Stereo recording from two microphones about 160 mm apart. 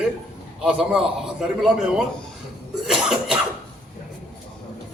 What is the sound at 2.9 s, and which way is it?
Cough, 5° right (ahead or behind).